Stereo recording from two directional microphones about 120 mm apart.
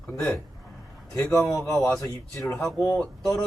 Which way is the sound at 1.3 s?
25° left (ahead or behind).